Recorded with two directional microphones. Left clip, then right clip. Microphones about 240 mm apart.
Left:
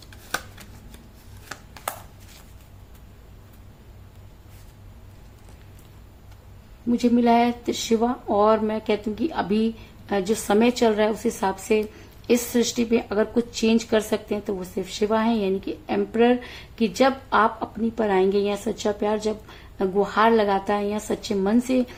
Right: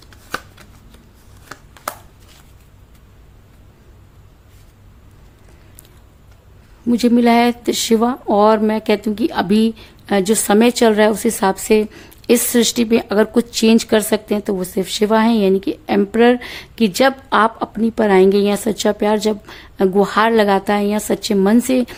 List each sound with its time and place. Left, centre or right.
0.1 s shuffling cards: centre
1.5 s a sound: centre
6.8 s speech: right